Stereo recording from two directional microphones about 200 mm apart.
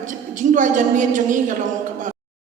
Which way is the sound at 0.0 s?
40° right (ahead or behind).